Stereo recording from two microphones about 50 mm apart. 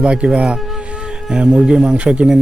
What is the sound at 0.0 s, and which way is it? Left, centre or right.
Speech, right.